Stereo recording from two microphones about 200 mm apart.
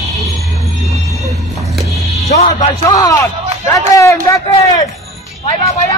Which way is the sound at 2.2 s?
30° left (ahead or behind).